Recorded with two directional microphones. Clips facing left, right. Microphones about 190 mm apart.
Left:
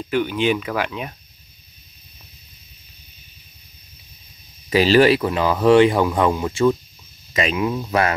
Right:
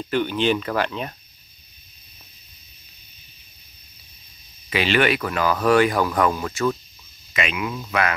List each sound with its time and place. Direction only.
0.1 s speech: 5° left (ahead or behind)
4.6 s speech: 35° left (ahead or behind); by 6.8 s 20° left (ahead or behind)
7.3 s speech: 35° left (ahead or behind)